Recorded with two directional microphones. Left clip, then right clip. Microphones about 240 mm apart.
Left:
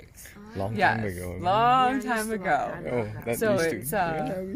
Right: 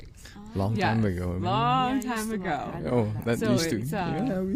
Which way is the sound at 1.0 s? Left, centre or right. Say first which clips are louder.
Right 3 dB; right.